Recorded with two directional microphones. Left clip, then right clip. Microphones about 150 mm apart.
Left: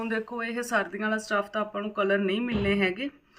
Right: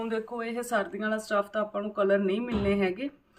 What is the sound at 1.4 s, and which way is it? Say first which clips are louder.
Speech: even; 35° right (ahead or behind).